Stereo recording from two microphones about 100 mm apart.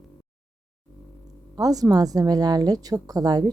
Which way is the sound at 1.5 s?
40° right (ahead or behind).